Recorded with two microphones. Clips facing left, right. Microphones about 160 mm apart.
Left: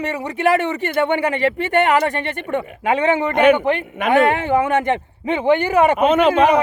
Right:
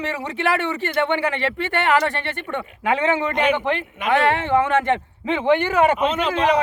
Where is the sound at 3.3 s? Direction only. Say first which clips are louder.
Left 6 dB; 55° left (ahead or behind).